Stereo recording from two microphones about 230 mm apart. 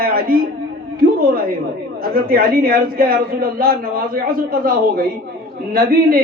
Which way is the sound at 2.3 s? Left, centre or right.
Right.